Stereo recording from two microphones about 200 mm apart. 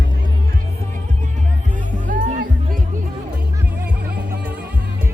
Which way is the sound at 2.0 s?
40° right (ahead or behind).